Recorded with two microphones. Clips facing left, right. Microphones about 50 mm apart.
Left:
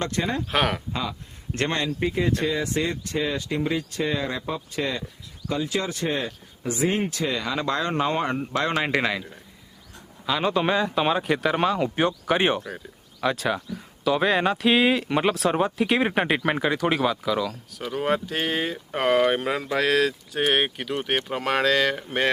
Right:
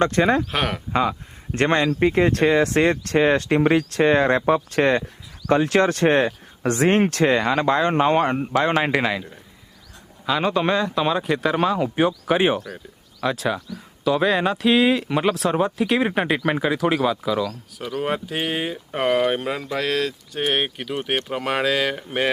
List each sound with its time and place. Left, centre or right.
0.0 s speech: right
0.5 s speech: centre
1.5 s speech: right
1.9 s speech: right
2.4 s speech: right
7.3 s speech: right
8.5 s speech: centre
18.0 s speech: centre